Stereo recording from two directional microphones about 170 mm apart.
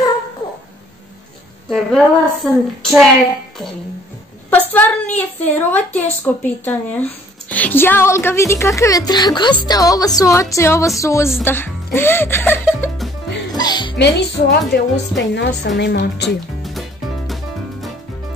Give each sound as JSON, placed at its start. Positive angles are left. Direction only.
{"t": 1.7, "sound": "a woman's voice", "side_deg": 0}
{"t": 4.5, "sound": "a sound", "side_deg": 10}
{"t": 5.1, "sound": "speech", "side_deg": 10}
{"t": 13.6, "sound": "music", "side_deg": 25}
{"t": 13.9, "sound": "speech", "side_deg": 80}
{"t": 17.3, "sound": "music", "side_deg": 0}